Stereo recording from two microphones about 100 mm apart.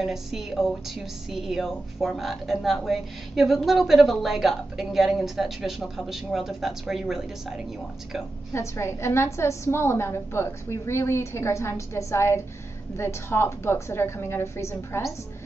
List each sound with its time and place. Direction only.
0.0 s a woman's voice: centre (ahead or behind)
8.5 s a woman's voice: 25° left (ahead or behind)